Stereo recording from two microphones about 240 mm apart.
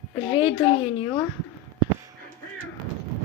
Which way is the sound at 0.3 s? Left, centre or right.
Left.